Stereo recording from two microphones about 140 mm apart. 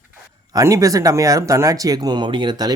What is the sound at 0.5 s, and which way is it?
Speech, 25° right (ahead or behind).